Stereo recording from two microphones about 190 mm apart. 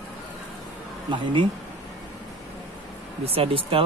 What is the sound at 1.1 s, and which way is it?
Speech, 25° right (ahead or behind).